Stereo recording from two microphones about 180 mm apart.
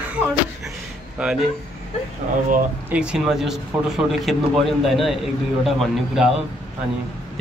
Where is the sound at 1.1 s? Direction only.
5° right (ahead or behind).